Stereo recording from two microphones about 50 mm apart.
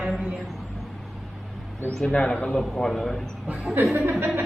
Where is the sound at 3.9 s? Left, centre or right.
Right.